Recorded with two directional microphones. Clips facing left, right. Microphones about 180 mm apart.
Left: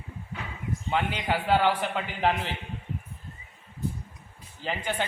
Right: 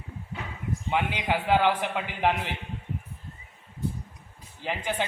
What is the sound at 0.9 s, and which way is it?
A man's voice, 15° right (ahead or behind).